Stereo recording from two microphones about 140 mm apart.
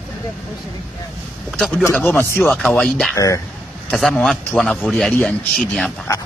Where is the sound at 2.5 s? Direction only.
5° left (ahead or behind).